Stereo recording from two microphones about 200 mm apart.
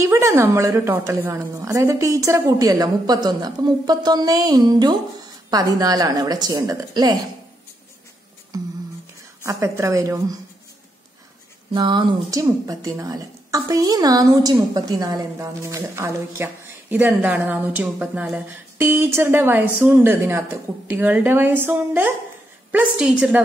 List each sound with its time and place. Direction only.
0.0 s a woman's voice: 15° right (ahead or behind)
9.4 s speech: 15° right (ahead or behind)
11.7 s a woman's voice: 25° right (ahead or behind); by 23.4 s 5° right (ahead or behind)